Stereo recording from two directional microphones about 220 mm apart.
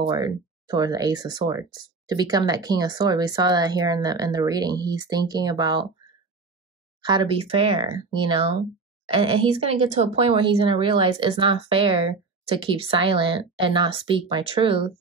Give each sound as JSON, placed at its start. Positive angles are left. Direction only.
{"t": 0.0, "sound": "speech", "side_deg": -20}
{"t": 7.0, "sound": "speech", "side_deg": -20}